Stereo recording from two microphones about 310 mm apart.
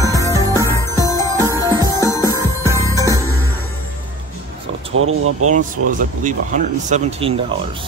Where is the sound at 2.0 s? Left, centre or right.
Centre.